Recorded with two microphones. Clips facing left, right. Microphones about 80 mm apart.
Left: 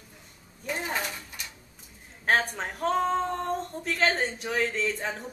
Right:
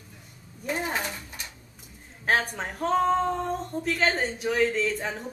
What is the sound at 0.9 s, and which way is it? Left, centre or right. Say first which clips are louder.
Speech: right 1 dB; right.